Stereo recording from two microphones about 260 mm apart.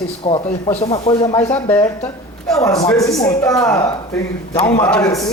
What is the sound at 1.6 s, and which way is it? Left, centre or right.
Speech, centre.